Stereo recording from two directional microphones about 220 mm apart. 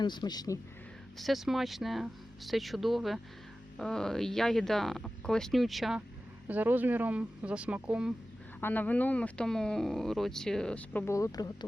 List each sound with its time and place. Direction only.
0.0 s a man's voice: 20° left (ahead or behind)
1.2 s speech: centre (ahead or behind)
8.6 s speech: 10° left (ahead or behind)